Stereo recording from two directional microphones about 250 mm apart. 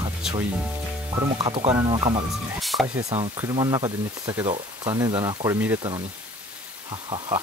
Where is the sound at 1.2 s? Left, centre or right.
Right.